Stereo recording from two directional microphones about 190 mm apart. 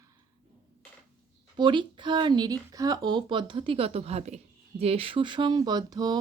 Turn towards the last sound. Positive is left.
turn(degrees=-20)  # may be behind; listen again after turning